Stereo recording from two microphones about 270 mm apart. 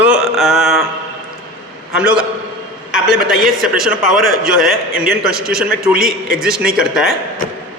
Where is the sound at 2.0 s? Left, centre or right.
Centre.